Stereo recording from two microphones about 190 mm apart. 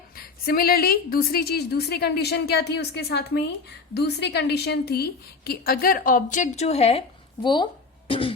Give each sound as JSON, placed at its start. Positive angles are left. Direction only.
{"t": 0.2, "sound": "a woman's voice", "side_deg": 55}
{"t": 7.4, "sound": "music", "side_deg": 25}